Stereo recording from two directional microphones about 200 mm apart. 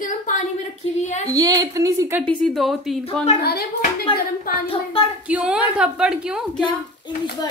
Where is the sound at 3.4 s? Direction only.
55° left (ahead or behind).